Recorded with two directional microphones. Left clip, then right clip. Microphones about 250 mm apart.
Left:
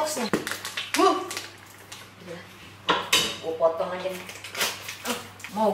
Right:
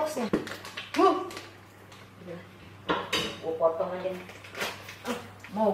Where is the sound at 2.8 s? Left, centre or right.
Centre.